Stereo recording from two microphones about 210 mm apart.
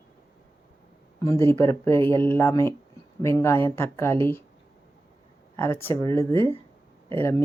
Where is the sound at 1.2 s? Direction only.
10° left (ahead or behind).